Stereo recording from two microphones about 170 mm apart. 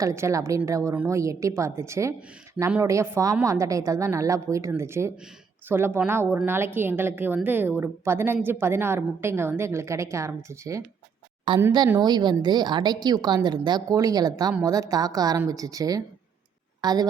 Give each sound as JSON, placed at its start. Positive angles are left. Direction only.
{"t": 0.0, "sound": "a woman's voice", "side_deg": -15}
{"t": 11.5, "sound": "a woman's voice", "side_deg": -30}